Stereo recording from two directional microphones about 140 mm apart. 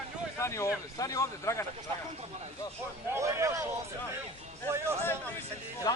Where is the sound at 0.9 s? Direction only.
25° left (ahead or behind).